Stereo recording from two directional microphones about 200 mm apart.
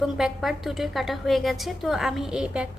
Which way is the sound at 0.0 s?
Centre (ahead or behind).